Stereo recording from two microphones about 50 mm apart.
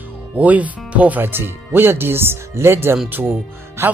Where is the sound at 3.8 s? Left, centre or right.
Right.